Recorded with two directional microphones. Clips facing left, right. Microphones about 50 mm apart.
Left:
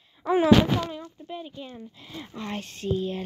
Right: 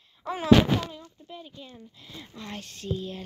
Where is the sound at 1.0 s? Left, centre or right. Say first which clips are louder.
Left 6 dB; left.